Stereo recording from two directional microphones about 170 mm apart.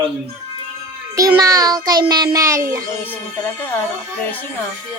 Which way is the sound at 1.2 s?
20° right (ahead or behind).